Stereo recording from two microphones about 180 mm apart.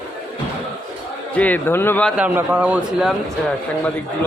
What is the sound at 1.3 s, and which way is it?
Speech, 10° left (ahead or behind).